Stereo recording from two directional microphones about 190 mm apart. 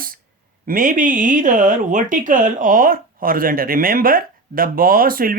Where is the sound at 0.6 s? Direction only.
45° right (ahead or behind).